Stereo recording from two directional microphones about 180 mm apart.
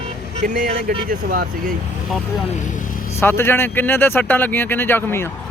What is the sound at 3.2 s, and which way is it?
Speech, 15° left (ahead or behind).